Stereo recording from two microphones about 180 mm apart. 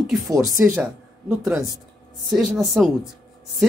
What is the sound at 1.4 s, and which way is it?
Speech, centre (ahead or behind).